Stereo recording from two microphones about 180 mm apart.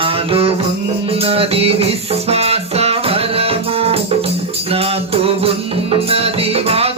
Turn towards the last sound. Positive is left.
turn(degrees=-35)  # may be behind; listen again after turning